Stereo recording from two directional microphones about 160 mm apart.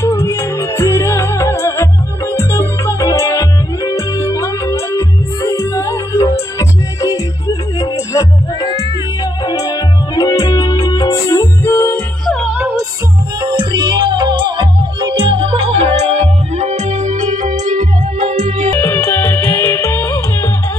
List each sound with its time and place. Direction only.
0.0 s music: 20° left (ahead or behind)
12.3 s music: 5° right (ahead or behind)
13.4 s music: 25° right (ahead or behind); by 18.7 s 45° right (ahead or behind)
18.7 s music: 15° left (ahead or behind)